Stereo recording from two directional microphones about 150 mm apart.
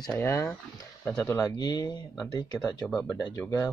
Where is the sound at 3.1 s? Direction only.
25° left (ahead or behind).